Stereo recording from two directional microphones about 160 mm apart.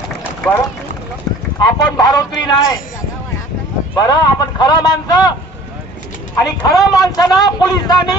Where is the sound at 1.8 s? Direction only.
25° left (ahead or behind).